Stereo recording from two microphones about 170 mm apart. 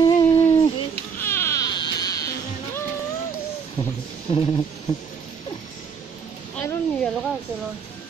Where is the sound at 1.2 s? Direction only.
15° left (ahead or behind).